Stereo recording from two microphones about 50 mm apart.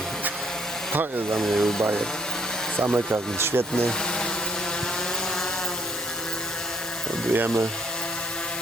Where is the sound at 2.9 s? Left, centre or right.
Right.